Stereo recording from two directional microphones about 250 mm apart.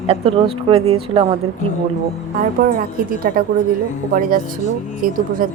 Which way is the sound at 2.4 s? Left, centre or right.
Right.